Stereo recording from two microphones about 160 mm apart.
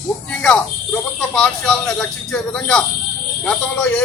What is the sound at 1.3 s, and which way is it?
A man's voice, 5° left (ahead or behind).